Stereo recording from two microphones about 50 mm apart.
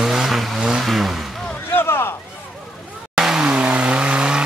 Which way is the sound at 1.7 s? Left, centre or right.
Left.